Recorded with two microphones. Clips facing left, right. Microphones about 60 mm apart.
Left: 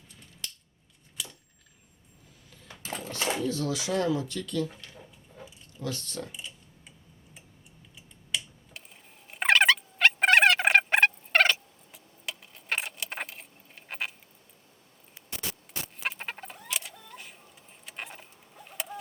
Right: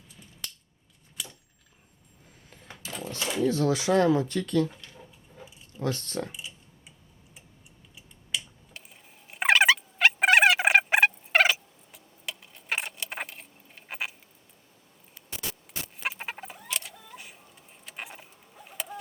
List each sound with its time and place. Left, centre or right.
1.1 s a sound: centre
2.5 s sewing machine: right
3.2 s speech: left
3.4 s speech: right
5.3 s a sound: centre
5.8 s speech: right
6.3 s typing: centre
7.9 s a sound: centre
16.0 s chicken: centre